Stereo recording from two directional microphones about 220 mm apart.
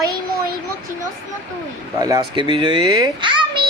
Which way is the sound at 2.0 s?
15° right (ahead or behind).